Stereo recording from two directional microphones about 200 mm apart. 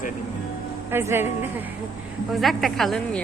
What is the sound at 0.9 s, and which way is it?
Speech, 10° right (ahead or behind).